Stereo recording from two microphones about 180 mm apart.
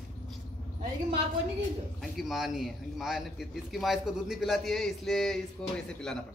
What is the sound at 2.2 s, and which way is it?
A man's voice, centre (ahead or behind).